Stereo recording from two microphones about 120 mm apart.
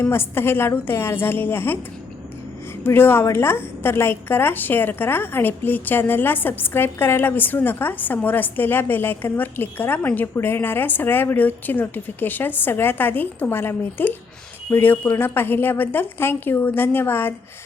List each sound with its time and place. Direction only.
0.0 s a woman's voice: 20° left (ahead or behind)
2.8 s a woman's voice: 20° left (ahead or behind)